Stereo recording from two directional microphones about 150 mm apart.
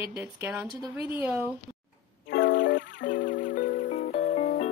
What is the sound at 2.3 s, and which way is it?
Music, 75° left (ahead or behind).